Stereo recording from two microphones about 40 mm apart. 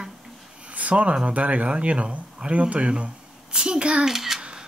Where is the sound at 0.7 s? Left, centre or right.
Right.